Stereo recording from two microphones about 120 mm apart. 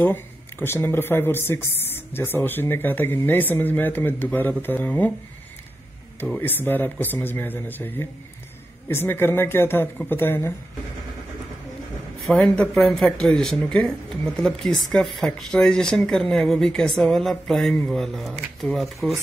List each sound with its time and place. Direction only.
0.0 s speech: 15° left (ahead or behind)
6.4 s speech: 15° left (ahead or behind)
12.3 s speech: 10° left (ahead or behind)